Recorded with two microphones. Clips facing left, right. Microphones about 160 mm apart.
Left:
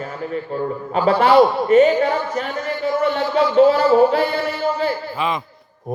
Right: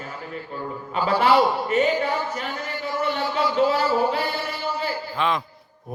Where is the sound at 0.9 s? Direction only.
40° left (ahead or behind).